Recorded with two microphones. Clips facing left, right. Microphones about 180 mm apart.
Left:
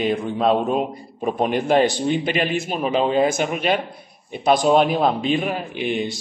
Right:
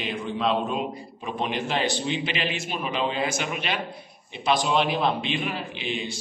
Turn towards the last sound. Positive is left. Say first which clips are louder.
# left 7 dB
turn(degrees=55)  # may be behind; listen again after turning